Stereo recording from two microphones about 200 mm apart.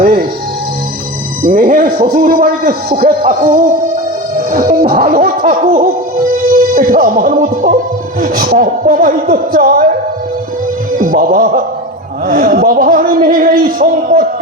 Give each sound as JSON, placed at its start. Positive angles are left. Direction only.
{"t": 0.0, "sound": "music", "side_deg": -50}
{"t": 1.4, "sound": "a man's voice", "side_deg": -45}
{"t": 4.5, "sound": "music", "side_deg": -45}
{"t": 8.2, "sound": "speech", "side_deg": -40}
{"t": 10.9, "sound": "a man's voice", "side_deg": -40}